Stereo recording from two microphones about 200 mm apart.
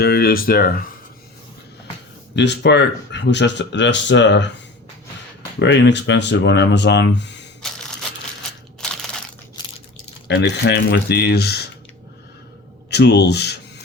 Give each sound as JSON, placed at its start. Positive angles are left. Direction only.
{"t": 0.0, "sound": "speech", "side_deg": 50}
{"t": 2.3, "sound": "speech", "side_deg": 60}
{"t": 5.5, "sound": "speech", "side_deg": 60}
{"t": 8.8, "sound": "crushing", "side_deg": 0}
{"t": 10.2, "sound": "speech", "side_deg": 60}
{"t": 12.9, "sound": "speech", "side_deg": 55}